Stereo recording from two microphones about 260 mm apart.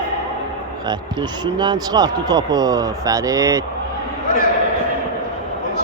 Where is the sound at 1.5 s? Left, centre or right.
Centre.